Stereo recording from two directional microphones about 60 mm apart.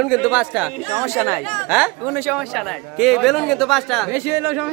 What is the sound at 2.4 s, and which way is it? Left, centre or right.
Speech, centre.